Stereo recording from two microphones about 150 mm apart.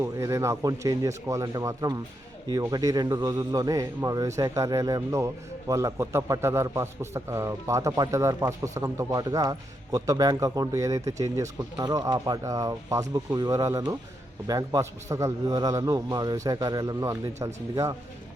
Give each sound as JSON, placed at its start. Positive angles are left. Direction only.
{"t": 0.0, "sound": "a man's voice", "side_deg": -20}